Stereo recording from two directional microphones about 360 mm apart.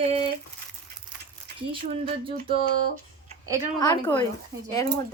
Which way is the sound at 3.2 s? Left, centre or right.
Centre.